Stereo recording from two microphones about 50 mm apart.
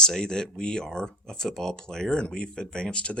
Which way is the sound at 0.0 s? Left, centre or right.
Centre.